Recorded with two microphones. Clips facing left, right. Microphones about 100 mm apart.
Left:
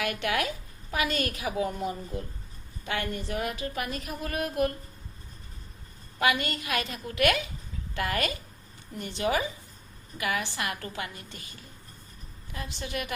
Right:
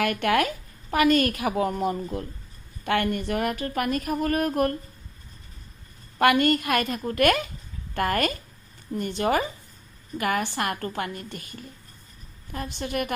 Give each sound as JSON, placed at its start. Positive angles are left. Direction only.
{"t": 0.0, "sound": "a woman's voice", "side_deg": -50}
{"t": 6.1, "sound": "a woman's voice", "side_deg": -55}